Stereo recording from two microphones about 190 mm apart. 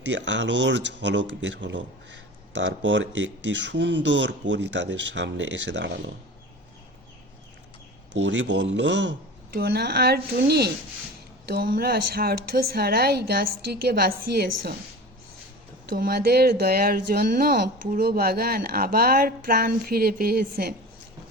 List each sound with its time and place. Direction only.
0.1 s speech: 70° right (ahead or behind)
8.1 s a woman's voice: 75° right (ahead or behind); by 14.8 s 55° right (ahead or behind)
15.9 s speech: 50° right (ahead or behind)